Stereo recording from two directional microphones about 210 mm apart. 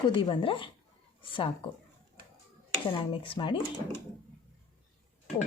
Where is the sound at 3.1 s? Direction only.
25° left (ahead or behind).